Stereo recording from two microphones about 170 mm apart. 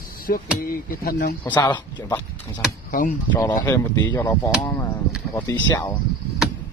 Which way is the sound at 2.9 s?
55° left (ahead or behind).